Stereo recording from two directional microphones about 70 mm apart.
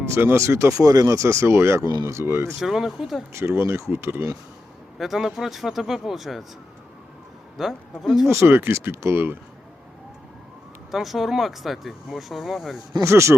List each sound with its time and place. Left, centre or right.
0.1 s speech: right
0.7 s speech: right
2.6 s speech: centre
3.3 s speech: right
4.9 s speech: centre
7.6 s speech: centre
8.3 s speech: right
10.9 s speech: centre
13.0 s speech: right